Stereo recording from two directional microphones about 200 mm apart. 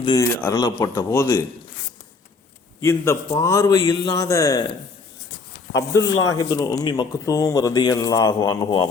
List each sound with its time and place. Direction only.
0.0 s a man's voice: 20° left (ahead or behind)
2.8 s speech: 15° left (ahead or behind)
5.7 s speech: 55° left (ahead or behind)
6.3 s speech: 15° left (ahead or behind)